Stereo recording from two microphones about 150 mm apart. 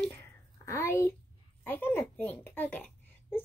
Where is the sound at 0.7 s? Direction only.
20° left (ahead or behind).